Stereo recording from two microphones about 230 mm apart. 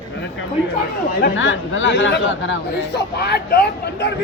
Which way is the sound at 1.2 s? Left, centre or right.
Left.